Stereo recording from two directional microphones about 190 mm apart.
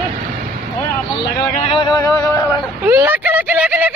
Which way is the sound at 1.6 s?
25° left (ahead or behind).